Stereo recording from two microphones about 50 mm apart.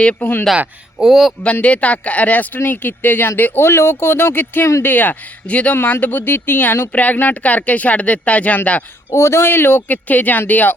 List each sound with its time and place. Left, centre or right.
0.2 s speech: left
0.9 s speech: centre
1.6 s speech: left
5.5 s speech: left
5.7 s speech: left
6.9 s speech: left
9.1 s speech: left
10.1 s speech: left